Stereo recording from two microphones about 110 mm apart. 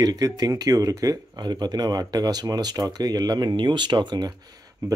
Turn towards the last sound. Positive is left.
turn(degrees=-30)  # may be behind; listen again after turning